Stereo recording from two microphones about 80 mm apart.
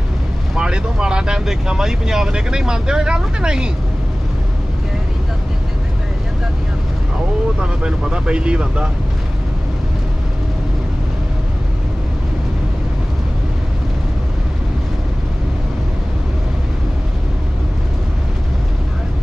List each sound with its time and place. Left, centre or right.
0.6 s speech: centre
7.6 s speech: centre